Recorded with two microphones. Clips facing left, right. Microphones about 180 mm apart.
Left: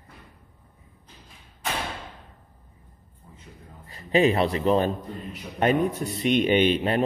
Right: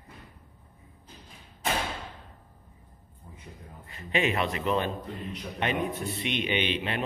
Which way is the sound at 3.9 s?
35° left (ahead or behind).